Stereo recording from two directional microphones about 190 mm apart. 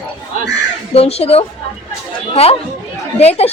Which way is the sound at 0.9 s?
30° left (ahead or behind).